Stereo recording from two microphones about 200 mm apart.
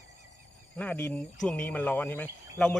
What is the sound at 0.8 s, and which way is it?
Speech, 5° left (ahead or behind).